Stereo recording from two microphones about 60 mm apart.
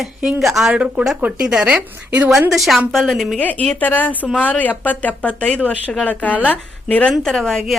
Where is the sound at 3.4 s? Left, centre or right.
Left.